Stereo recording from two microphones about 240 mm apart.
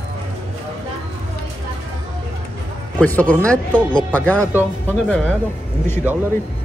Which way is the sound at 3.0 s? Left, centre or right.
Centre.